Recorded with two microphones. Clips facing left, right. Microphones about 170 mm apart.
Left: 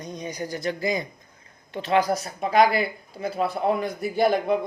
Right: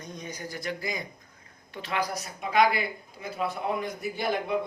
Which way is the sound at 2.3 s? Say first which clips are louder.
Left 4 dB; 35° left (ahead or behind).